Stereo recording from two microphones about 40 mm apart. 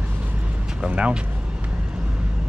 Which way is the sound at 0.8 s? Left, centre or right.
Right.